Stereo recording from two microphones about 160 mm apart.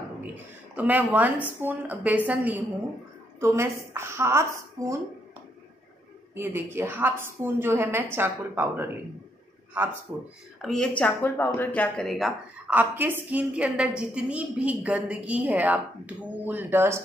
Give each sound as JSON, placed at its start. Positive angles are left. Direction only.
{"t": 0.7, "sound": "a woman's voice", "side_deg": -10}
{"t": 6.3, "sound": "a woman's voice", "side_deg": -15}
{"t": 10.1, "sound": "speech", "side_deg": 0}
{"t": 12.7, "sound": "a woman's voice", "side_deg": -10}